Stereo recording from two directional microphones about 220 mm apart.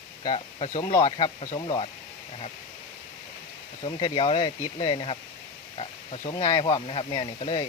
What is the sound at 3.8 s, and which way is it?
Speech, 25° left (ahead or behind).